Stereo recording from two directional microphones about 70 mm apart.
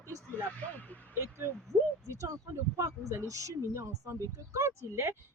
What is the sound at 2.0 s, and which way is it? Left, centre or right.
Speech, right.